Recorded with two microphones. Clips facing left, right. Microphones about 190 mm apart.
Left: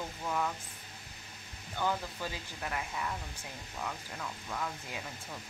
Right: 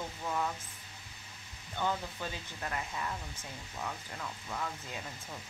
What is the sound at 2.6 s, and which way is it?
Speech, 10° left (ahead or behind).